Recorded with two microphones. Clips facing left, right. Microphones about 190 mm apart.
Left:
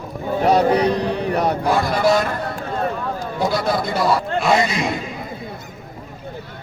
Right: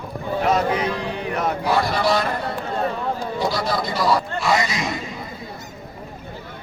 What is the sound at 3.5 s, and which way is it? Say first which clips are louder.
Speech: left 3 dB; 55° left (ahead or behind).